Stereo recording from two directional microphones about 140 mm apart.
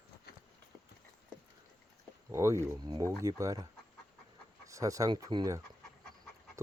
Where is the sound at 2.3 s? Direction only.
20° right (ahead or behind).